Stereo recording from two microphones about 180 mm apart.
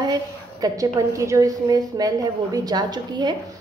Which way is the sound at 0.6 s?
20° right (ahead or behind).